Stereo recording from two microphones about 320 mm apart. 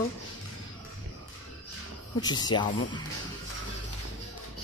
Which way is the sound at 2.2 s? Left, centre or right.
Centre.